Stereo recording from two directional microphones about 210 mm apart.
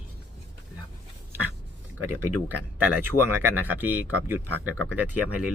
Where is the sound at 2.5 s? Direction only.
10° right (ahead or behind).